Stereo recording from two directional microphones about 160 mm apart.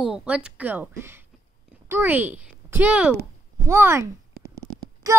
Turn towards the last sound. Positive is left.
turn(degrees=-20)  # may be behind; listen again after turning